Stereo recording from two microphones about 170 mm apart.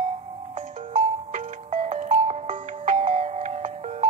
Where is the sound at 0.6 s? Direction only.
45° right (ahead or behind).